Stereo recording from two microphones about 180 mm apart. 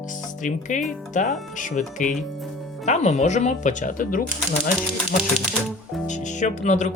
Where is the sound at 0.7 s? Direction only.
45° left (ahead or behind).